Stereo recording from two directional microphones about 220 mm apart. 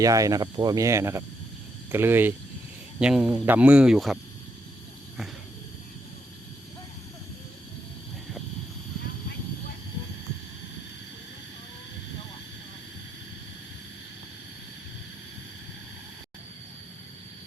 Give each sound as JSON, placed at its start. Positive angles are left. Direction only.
{"t": 0.0, "sound": "speech", "side_deg": -15}